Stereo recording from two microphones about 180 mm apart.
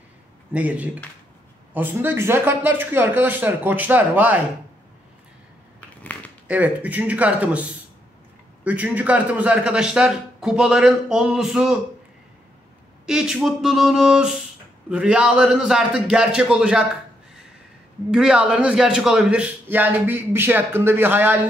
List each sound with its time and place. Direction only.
0.5 s a man's voice: 10° right (ahead or behind)
6.4 s a man's voice: 10° right (ahead or behind)
13.0 s a man's voice: 5° right (ahead or behind)
18.1 s a man's voice: 5° right (ahead or behind)